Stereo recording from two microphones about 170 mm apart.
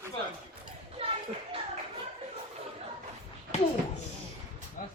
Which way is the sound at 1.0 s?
35° right (ahead or behind).